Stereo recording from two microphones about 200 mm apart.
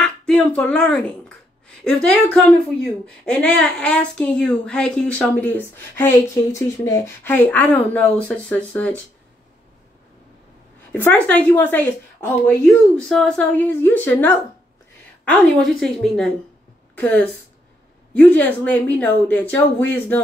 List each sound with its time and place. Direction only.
0.0 s a woman's voice: 5° left (ahead or behind)
10.9 s a woman's voice: 10° left (ahead or behind)
15.8 s a woman's voice: centre (ahead or behind)